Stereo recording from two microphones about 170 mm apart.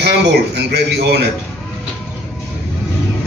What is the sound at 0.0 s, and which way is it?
Speech, 80° right.